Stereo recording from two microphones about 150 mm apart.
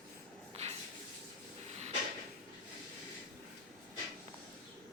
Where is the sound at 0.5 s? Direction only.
45° right (ahead or behind).